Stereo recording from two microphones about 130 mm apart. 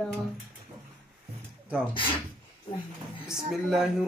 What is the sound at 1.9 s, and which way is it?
Speech, 40° left (ahead or behind).